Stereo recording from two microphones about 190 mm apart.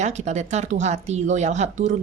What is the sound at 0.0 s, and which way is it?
Speech, 35° right (ahead or behind).